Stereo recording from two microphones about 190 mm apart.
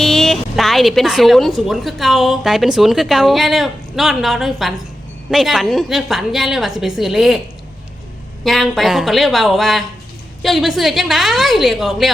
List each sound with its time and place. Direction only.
0.0 s speech: centre (ahead or behind)
8.4 s speech: centre (ahead or behind)